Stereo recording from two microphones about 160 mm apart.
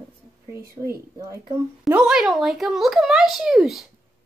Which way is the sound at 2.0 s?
Centre (ahead or behind).